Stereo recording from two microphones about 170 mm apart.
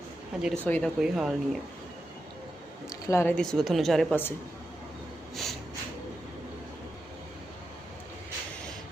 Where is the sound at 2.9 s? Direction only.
15° left (ahead or behind).